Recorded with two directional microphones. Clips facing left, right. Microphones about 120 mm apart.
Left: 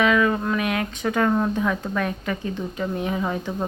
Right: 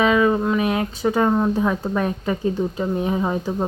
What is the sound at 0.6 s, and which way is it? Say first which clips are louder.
Speech: right 4 dB; 25° right (ahead or behind).